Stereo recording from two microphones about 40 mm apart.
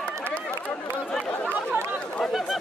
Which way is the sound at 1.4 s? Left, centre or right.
Right.